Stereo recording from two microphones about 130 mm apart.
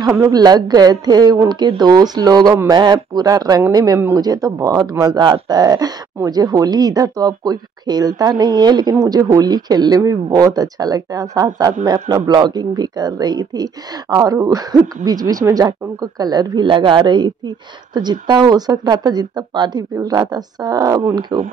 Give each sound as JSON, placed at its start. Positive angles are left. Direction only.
{"t": 0.0, "sound": "speech", "side_deg": -25}